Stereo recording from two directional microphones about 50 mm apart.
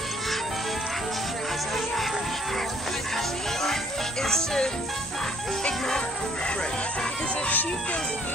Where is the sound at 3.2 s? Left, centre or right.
Centre.